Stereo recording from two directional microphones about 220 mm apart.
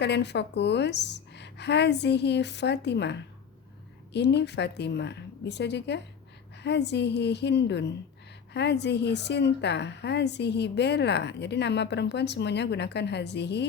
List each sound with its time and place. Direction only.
0.0 s a woman's voice: 50° left (ahead or behind)